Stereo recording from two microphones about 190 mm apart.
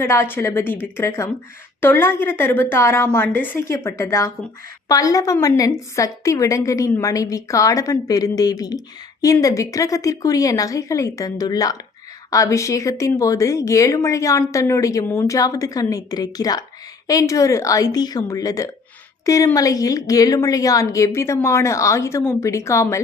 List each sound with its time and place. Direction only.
0.0 s speech: 15° left (ahead or behind)